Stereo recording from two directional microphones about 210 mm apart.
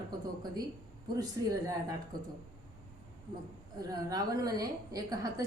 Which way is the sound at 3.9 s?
20° right (ahead or behind).